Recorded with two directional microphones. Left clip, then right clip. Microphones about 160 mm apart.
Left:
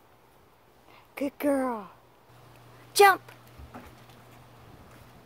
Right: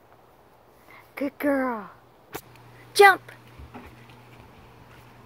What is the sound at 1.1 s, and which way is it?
Speech, 5° left (ahead or behind).